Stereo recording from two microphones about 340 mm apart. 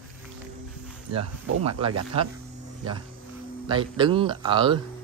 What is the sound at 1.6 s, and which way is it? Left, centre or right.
Speech, centre.